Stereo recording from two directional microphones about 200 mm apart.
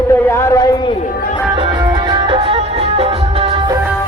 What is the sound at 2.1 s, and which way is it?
Music, 25° right (ahead or behind).